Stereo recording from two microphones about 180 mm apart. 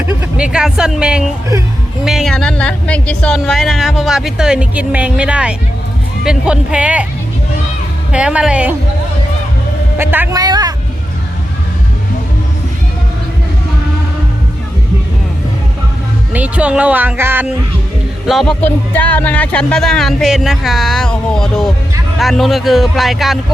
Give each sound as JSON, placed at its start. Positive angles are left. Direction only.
{"t": 0.1, "sound": "speech", "side_deg": -10}
{"t": 8.1, "sound": "speech", "side_deg": -5}
{"t": 10.0, "sound": "speech", "side_deg": -10}
{"t": 10.4, "sound": "vehicle", "side_deg": -20}
{"t": 16.3, "sound": "speech", "side_deg": -5}
{"t": 18.3, "sound": "speech", "side_deg": 0}